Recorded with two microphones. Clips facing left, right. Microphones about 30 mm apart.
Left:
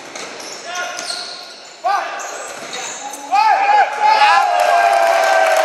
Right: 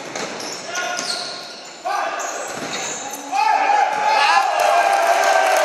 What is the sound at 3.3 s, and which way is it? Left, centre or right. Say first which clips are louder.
Basketball bounce: left 5 dB; left.